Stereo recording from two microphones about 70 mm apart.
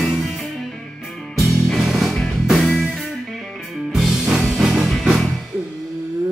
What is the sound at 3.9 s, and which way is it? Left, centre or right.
Music, centre.